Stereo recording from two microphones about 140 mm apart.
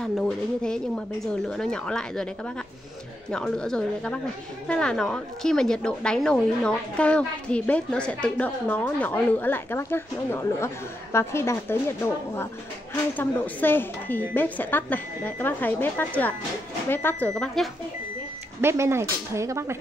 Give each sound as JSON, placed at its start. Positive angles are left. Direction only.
{"t": 0.6, "sound": "a woman's voice", "side_deg": 5}
{"t": 3.3, "sound": "a woman's voice", "side_deg": 5}
{"t": 17.3, "sound": "a woman's voice", "side_deg": 0}
{"t": 18.6, "sound": "speech", "side_deg": -20}